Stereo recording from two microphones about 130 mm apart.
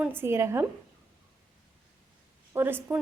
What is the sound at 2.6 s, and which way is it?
Speech, 15° right (ahead or behind).